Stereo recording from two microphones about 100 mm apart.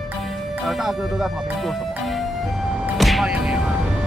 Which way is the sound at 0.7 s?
Centre (ahead or behind).